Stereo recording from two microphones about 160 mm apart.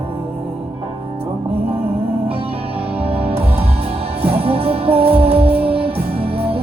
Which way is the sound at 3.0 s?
35° right (ahead or behind).